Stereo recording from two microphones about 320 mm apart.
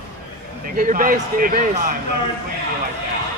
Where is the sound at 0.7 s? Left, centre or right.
Right.